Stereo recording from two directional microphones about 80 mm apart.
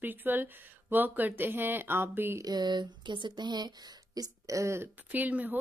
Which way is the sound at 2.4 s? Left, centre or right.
Right.